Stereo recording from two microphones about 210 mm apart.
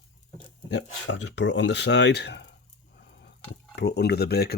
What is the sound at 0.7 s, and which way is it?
Speech, 60° left (ahead or behind).